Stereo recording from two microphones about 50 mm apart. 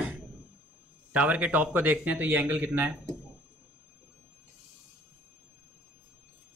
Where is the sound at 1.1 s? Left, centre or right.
Right.